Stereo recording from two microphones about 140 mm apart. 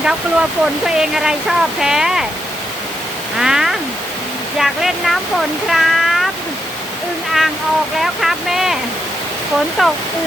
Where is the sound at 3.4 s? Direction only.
5° right (ahead or behind).